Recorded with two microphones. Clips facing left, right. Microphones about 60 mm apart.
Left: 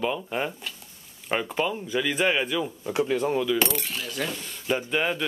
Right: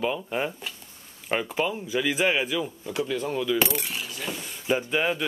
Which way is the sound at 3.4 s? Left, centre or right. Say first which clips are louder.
Even; centre.